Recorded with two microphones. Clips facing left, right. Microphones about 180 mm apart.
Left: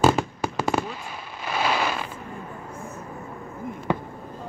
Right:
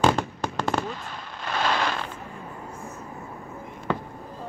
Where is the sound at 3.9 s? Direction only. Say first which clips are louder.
Left 2 dB; 15° left (ahead or behind).